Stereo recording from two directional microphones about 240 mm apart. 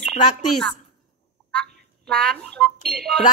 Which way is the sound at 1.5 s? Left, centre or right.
Centre.